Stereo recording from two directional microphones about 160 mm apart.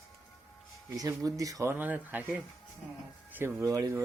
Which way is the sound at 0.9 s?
20° right (ahead or behind).